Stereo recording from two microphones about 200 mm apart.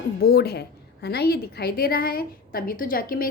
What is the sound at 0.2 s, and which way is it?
A woman's voice, 50° left (ahead or behind).